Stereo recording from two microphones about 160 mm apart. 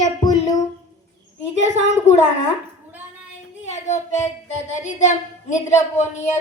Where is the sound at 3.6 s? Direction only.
45° left (ahead or behind).